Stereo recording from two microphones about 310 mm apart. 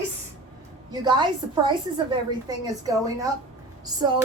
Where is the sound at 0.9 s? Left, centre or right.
Centre.